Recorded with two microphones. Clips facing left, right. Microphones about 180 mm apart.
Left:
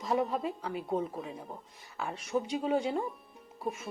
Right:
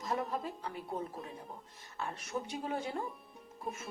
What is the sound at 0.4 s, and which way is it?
Speech, 80° left.